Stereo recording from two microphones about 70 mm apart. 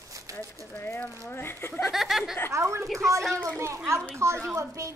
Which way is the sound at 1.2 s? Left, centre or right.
Left.